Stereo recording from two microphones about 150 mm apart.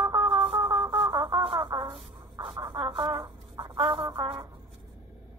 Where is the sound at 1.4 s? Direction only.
35° right (ahead or behind).